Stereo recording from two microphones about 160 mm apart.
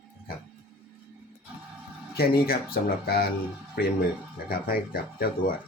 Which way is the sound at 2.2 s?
70° left (ahead or behind).